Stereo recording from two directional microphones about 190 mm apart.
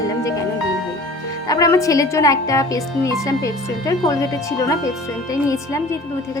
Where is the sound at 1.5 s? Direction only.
20° left (ahead or behind).